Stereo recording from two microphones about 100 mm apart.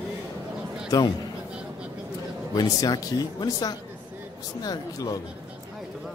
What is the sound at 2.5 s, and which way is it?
Speech, 40° left (ahead or behind).